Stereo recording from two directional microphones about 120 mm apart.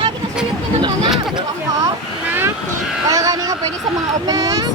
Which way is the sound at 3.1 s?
30° right (ahead or behind).